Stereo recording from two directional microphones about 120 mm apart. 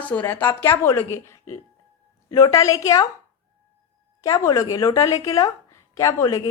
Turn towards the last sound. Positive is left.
turn(degrees=30)  # may be behind; listen again after turning